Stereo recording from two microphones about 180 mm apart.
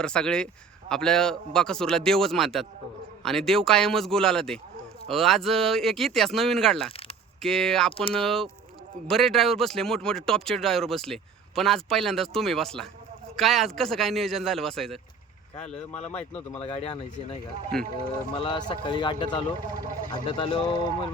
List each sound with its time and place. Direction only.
0.0 s speech: 5° left (ahead or behind)
16.6 s speech: 35° left (ahead or behind)
17.7 s speech: 5° left (ahead or behind)
18.3 s a man's voice: 25° left (ahead or behind)